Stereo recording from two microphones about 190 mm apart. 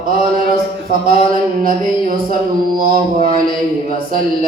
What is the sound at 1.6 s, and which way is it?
Mantra, 50° right (ahead or behind).